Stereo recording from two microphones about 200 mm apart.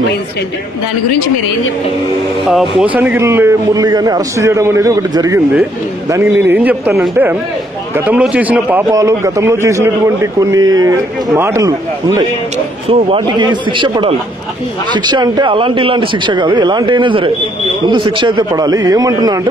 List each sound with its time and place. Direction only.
2.4 s speech: centre (ahead or behind)
3.0 s a man's voice: 10° right (ahead or behind)
12.8 s a man's voice: 25° right (ahead or behind)